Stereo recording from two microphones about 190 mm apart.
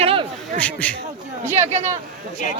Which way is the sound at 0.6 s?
5° left (ahead or behind).